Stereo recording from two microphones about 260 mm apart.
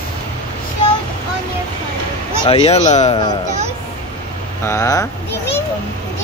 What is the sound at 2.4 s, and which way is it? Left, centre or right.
Speech, left.